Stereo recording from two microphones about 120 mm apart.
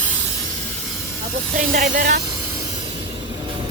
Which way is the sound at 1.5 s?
90° right.